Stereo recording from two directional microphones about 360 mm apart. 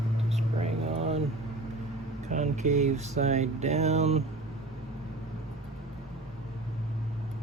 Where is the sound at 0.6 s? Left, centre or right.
Centre.